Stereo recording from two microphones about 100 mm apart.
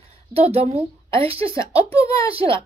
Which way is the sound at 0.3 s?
85° right.